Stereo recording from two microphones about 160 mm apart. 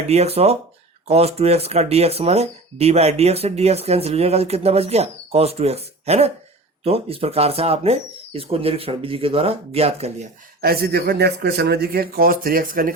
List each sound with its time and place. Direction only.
0.1 s speech: 40° right (ahead or behind)
10.6 s speech: 75° right (ahead or behind)